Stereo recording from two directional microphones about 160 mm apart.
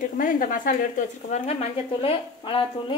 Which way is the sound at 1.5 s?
40° left (ahead or behind).